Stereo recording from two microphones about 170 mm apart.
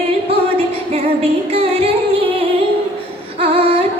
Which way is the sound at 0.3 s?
35° right (ahead or behind).